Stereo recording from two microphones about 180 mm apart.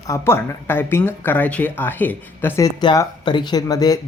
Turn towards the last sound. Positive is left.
turn(degrees=20)  # may be behind; listen again after turning